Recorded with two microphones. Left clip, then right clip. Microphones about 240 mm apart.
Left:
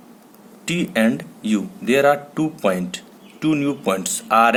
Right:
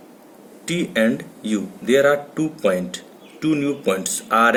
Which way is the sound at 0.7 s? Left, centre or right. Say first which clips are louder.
Even; left.